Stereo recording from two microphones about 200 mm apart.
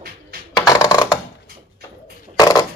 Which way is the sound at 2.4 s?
20° left (ahead or behind).